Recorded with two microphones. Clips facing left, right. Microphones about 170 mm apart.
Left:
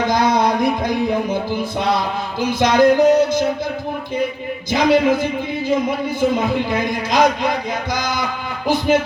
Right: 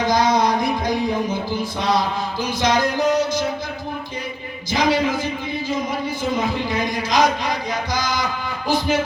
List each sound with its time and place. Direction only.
0.0 s a sound: 55° left (ahead or behind)
2.4 s music: 55° left (ahead or behind)
4.7 s speech: 55° left (ahead or behind)
6.7 s a man's voice: 55° left (ahead or behind)